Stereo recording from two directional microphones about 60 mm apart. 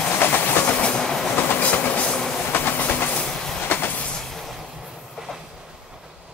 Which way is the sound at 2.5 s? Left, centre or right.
Left.